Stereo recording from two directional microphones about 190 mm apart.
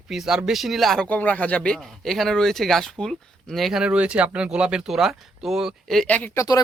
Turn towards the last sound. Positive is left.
turn(degrees=15)  # may be behind; listen again after turning